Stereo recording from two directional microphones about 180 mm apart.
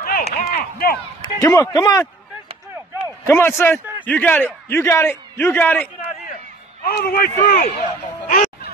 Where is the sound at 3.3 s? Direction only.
15° left (ahead or behind).